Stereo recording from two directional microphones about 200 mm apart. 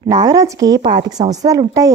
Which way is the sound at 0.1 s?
20° right (ahead or behind).